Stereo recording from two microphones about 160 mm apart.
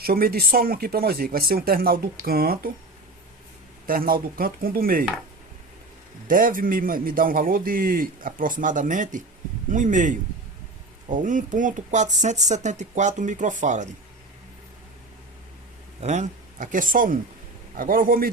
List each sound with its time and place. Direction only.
0.0 s speech: 70° right (ahead or behind)
3.8 s a man's voice: 65° right (ahead or behind)
6.2 s a man's voice: 60° right (ahead or behind)
16.0 s a man's voice: 45° right (ahead or behind); by 18.3 s 65° right (ahead or behind)